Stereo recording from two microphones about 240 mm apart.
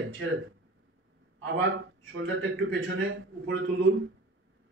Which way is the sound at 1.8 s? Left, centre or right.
Right.